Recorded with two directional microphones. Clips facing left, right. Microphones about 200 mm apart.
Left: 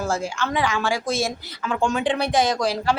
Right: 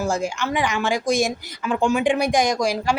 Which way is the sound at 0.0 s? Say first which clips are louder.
Right 2 dB; 15° right (ahead or behind).